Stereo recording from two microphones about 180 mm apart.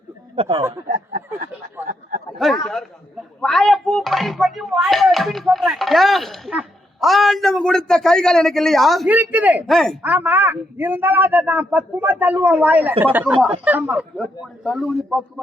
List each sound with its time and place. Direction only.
0.3 s speech: 30° right (ahead or behind)
0.9 s speech: 50° right (ahead or behind)
1.9 s a sound: 50° right (ahead or behind)
2.4 s a sound: centre (ahead or behind)
3.4 s speech: centre (ahead or behind)
10.0 s a man's voice: 10° right (ahead or behind)